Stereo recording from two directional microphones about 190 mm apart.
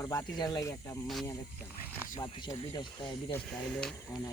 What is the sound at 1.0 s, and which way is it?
Speech, centre (ahead or behind).